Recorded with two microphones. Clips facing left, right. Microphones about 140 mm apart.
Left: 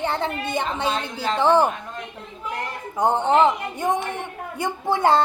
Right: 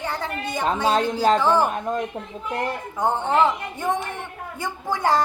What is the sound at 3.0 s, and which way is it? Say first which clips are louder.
A woman's voice: left 3 dB; 20° left (ahead or behind).